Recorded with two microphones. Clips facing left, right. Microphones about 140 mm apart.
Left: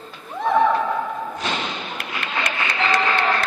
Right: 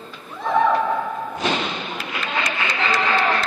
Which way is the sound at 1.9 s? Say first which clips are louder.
Right 2 dB; 60° left (ahead or behind).